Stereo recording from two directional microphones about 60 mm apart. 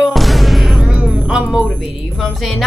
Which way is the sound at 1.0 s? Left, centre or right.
Centre.